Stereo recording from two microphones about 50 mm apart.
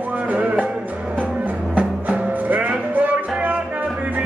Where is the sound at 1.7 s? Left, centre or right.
Right.